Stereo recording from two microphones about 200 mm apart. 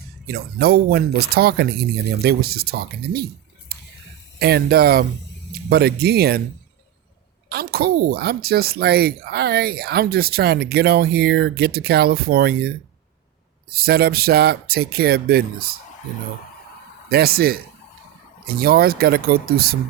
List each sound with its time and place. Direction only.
0.3 s speech: 50° right (ahead or behind)
3.7 s a sound: 50° right (ahead or behind)
4.4 s speech: 50° right (ahead or behind)
7.5 s speech: 50° right (ahead or behind)
17.1 s speech: 50° right (ahead or behind)